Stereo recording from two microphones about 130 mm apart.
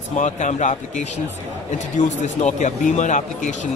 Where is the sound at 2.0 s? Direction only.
65° left (ahead or behind).